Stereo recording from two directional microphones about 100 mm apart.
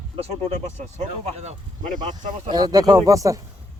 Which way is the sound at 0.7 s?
90° right.